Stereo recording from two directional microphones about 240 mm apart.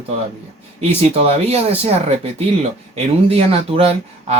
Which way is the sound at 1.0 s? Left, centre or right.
Right.